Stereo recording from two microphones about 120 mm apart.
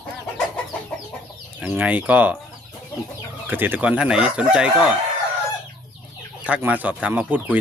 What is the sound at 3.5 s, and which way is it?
Speech, 15° right (ahead or behind).